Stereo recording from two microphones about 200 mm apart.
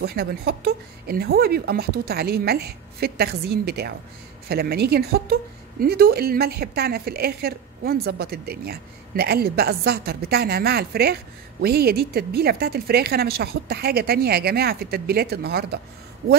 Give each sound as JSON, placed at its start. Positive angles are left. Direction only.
{"t": 0.0, "sound": "a woman's voice", "side_deg": -50}